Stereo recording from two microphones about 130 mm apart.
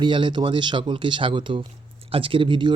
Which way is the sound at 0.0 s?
40° right (ahead or behind).